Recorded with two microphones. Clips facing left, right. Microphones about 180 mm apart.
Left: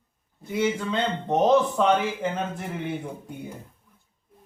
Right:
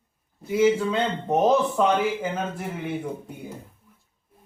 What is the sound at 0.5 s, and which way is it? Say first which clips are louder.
A man's voice: right 5 dB; 5° right (ahead or behind).